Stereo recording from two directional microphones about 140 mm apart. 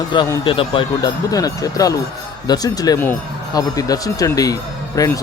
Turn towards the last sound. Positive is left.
turn(degrees=25)  # may be behind; listen again after turning